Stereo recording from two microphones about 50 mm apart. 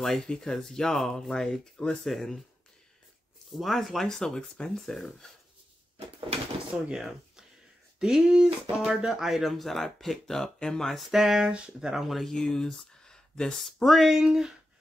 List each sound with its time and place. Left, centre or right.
0.0 s speech: centre
3.5 s speech: centre
6.7 s speech: right
8.0 s speech: centre
11.0 s a sound: centre
12.0 s speech: centre
12.3 s speech: centre
13.8 s speech: centre
14.2 s a sound: centre